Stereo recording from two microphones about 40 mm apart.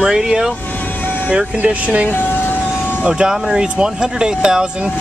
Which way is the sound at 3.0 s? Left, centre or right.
Right.